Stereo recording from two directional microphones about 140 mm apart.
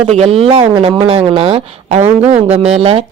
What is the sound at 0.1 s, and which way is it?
Speech, 50° right (ahead or behind).